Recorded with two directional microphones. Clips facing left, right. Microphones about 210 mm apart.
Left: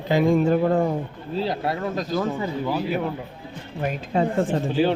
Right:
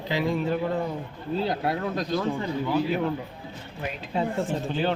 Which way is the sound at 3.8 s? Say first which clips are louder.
Left 5 dB; 50° left (ahead or behind).